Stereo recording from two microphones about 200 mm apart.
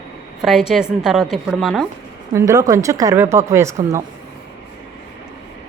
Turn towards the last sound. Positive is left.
turn(degrees=-15)  # may be behind; listen again after turning